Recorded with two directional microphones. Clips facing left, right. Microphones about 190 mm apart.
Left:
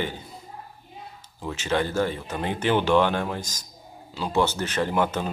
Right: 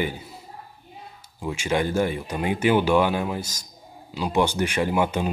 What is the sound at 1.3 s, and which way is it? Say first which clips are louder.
Speech: right 1 dB; 10° right (ahead or behind).